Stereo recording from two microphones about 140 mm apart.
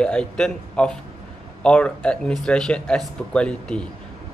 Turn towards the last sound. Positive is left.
turn(degrees=5)  # may be behind; listen again after turning